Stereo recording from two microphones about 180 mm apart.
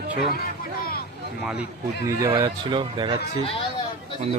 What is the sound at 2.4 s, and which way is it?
Speech, 30° right (ahead or behind).